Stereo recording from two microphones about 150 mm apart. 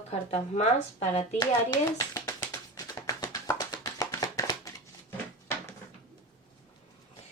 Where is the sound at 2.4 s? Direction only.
20° left (ahead or behind).